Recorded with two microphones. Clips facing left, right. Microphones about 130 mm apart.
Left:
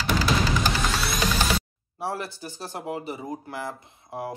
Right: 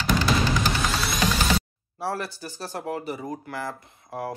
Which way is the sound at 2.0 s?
20° left (ahead or behind).